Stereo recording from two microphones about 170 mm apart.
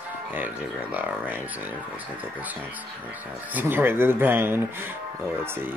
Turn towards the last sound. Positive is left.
turn(degrees=-10)  # may be behind; listen again after turning